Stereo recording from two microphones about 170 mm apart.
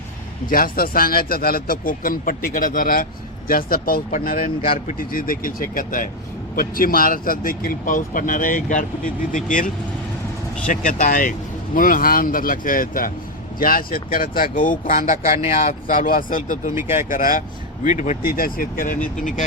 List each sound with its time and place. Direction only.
0.5 s speech: 60° left (ahead or behind)
16.7 s speech: 15° right (ahead or behind)
17.1 s speech: 50° left (ahead or behind)